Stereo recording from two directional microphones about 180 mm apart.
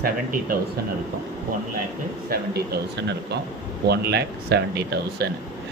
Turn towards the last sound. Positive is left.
turn(degrees=-65)  # may be behind; listen again after turning